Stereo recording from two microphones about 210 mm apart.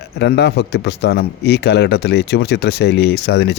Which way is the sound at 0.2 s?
55° left (ahead or behind).